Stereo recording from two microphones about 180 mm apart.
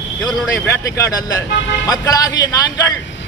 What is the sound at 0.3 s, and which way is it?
A man's voice, 15° left (ahead or behind).